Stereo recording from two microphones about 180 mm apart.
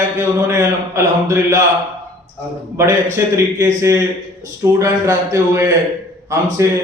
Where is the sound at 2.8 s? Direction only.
15° right (ahead or behind).